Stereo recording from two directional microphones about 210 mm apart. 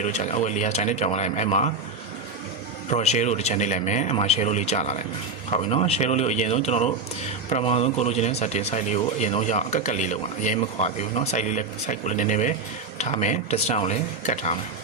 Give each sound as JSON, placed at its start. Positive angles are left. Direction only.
{"t": 0.0, "sound": "speech", "side_deg": 35}
{"t": 2.9, "sound": "speech", "side_deg": 30}